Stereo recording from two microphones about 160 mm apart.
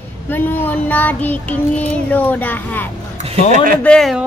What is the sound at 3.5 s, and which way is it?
Speech, 60° right (ahead or behind).